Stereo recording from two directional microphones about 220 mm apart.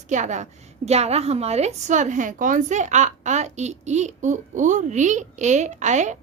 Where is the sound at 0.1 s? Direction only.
35° right (ahead or behind).